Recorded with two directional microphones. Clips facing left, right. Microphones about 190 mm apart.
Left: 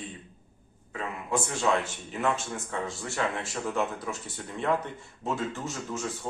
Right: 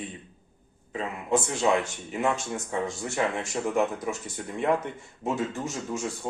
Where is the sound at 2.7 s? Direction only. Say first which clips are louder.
Right 4 dB; 15° right (ahead or behind).